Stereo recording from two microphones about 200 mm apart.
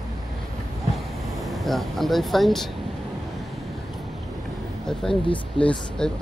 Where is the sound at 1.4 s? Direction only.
Centre (ahead or behind).